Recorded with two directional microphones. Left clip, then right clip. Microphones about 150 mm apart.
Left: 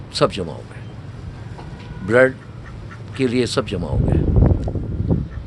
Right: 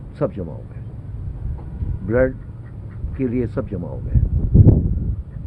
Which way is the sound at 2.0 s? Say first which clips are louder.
Left 4 dB; 20° left (ahead or behind).